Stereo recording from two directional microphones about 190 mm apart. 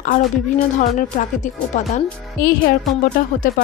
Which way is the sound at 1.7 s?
40° left (ahead or behind).